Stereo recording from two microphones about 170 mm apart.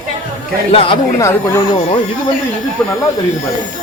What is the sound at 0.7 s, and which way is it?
Speech, 35° left (ahead or behind).